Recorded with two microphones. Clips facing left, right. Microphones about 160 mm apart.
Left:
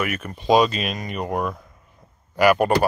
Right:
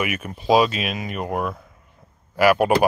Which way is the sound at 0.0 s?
10° right (ahead or behind).